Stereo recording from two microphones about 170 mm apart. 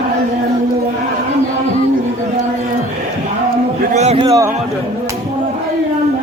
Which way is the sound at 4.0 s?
35° right (ahead or behind).